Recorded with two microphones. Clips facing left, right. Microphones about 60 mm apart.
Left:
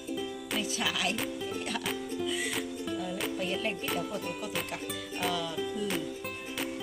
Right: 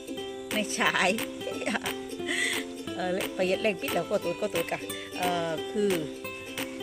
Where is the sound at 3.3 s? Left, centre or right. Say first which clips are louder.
Right 8 dB; right.